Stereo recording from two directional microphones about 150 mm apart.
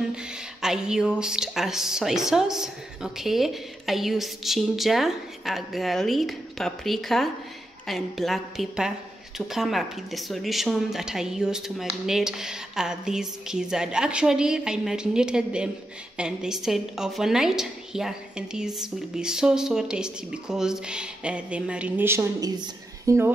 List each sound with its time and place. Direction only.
0.1 s a woman's voice: 5° right (ahead or behind)